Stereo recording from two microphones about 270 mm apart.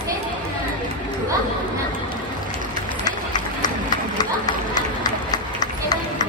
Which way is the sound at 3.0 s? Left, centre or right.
Centre.